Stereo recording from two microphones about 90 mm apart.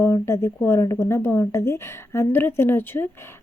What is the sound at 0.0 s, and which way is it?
A woman's voice, 30° left (ahead or behind).